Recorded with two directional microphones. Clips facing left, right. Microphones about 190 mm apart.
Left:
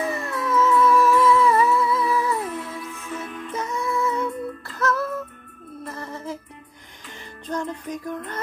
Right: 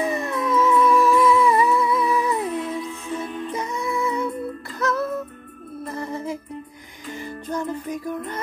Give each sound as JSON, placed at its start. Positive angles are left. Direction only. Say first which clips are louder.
{"t": 0.0, "sound": "a sound", "louder": "right 3 dB", "side_deg": -20}
{"t": 2.9, "sound": "music", "louder": "right 4 dB", "side_deg": -30}
{"t": 3.5, "sound": "music", "louder": "left 2 dB", "side_deg": -15}